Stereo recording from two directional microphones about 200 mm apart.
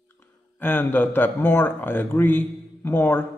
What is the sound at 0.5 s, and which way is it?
Speech, 10° left (ahead or behind).